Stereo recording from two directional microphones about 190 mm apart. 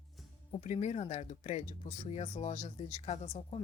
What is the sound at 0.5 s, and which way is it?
Speech, 40° left (ahead or behind).